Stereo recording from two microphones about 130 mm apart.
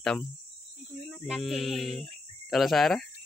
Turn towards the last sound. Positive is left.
turn(degrees=0)  # may be behind; listen again after turning